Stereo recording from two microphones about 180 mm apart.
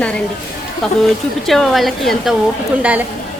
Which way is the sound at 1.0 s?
Centre (ahead or behind).